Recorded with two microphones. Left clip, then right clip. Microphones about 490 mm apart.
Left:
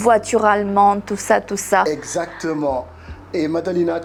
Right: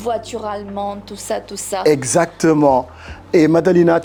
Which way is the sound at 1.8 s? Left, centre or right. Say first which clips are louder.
Right 5 dB; right.